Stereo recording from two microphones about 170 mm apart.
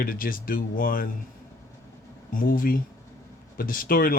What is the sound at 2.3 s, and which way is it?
Speech, 55° left (ahead or behind).